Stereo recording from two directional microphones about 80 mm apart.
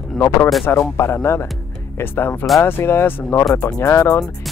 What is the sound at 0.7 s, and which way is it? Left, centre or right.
Speech, left.